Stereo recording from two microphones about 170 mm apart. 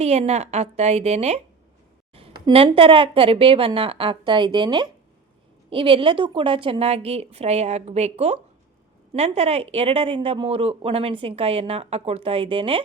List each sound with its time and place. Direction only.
0.0 s speech: 40° right (ahead or behind)
2.5 s speech: 35° right (ahead or behind)